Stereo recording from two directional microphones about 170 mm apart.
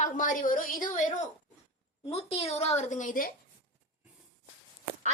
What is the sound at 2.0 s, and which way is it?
A woman's voice, 35° left (ahead or behind).